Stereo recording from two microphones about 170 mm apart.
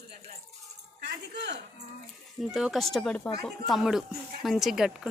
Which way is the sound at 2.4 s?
Centre (ahead or behind).